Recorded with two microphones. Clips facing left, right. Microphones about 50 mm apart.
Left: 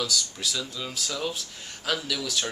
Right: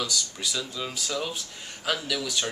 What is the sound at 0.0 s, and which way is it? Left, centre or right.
Speech, centre.